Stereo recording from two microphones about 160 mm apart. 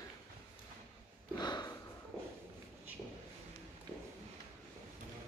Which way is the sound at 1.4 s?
25° left (ahead or behind).